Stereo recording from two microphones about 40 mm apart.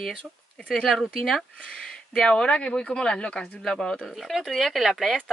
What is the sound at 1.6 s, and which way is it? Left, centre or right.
Speech, centre.